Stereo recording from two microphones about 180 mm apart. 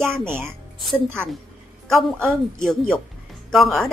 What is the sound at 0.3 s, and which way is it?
Speech, 15° right (ahead or behind).